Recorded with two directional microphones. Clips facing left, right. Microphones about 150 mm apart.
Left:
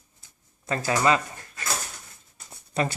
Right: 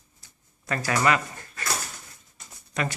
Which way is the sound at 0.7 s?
25° left (ahead or behind).